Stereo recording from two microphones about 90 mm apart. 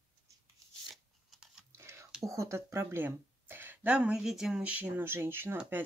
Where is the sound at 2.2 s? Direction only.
35° right (ahead or behind).